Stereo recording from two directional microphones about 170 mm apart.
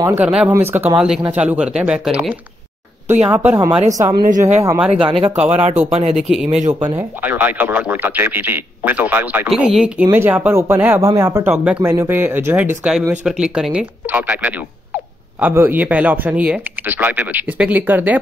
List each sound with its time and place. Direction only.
0.0 s a man's voice: 10° right (ahead or behind)
3.5 s a man's voice: 25° right (ahead or behind); by 4.9 s 10° right (ahead or behind)
4.9 s speech: 30° right (ahead or behind)
6.1 s a man's voice: 5° right (ahead or behind)